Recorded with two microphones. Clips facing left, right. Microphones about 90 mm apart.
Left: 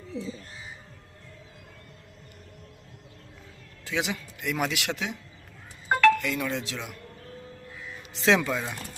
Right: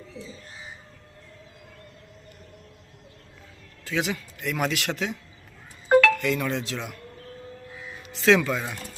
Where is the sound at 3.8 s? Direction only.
15° left (ahead or behind).